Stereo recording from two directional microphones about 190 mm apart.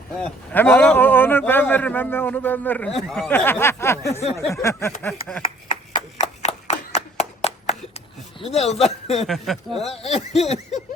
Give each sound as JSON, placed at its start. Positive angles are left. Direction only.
{"t": 0.2, "sound": "speech", "side_deg": 10}
{"t": 6.1, "sound": "clapping", "side_deg": 35}
{"t": 8.4, "sound": "a man's voice", "side_deg": 35}
{"t": 9.2, "sound": "speech", "side_deg": 0}
{"t": 10.0, "sound": "a man's voice", "side_deg": 35}